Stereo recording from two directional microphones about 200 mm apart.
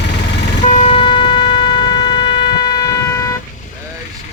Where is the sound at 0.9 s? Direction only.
25° left (ahead or behind).